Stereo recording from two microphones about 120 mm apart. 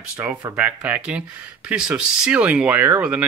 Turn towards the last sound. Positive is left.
turn(degrees=-10)  # may be behind; listen again after turning